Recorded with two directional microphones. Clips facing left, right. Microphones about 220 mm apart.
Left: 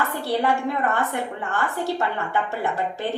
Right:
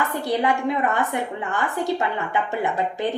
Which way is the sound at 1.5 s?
15° right (ahead or behind).